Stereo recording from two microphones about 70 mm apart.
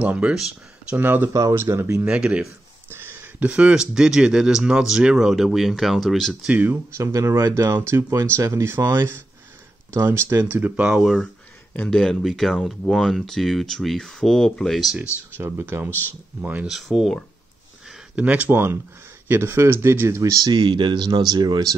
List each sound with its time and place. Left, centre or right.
0.0 s speech: centre
0.9 s speech: right
2.0 s speech: centre
2.9 s a sound: right
3.4 s speech: centre
6.5 s speech: right
7.0 s speech: right
10.3 s speech: right
10.9 s speech: centre
11.9 s speech: centre
15.3 s speech: right
16.6 s speech: centre
18.1 s speech: centre; by 20.4 s right
20.4 s speech: right